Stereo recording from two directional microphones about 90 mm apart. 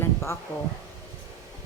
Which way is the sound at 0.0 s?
30° left (ahead or behind).